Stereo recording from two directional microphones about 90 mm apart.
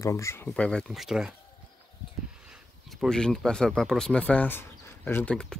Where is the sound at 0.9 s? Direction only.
5° right (ahead or behind).